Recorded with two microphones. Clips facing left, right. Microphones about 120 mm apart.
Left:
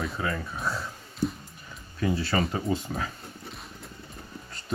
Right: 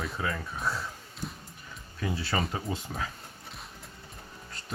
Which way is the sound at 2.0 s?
5° right (ahead or behind).